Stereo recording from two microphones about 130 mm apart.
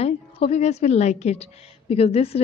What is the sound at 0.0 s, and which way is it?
A woman's voice, 55° left (ahead or behind).